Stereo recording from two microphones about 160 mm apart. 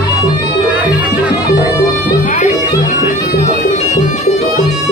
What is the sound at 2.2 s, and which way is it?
Music, 50° left (ahead or behind).